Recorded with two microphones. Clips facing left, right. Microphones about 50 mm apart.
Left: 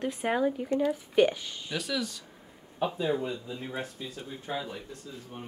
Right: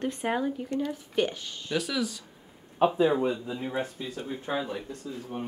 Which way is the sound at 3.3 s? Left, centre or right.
Right.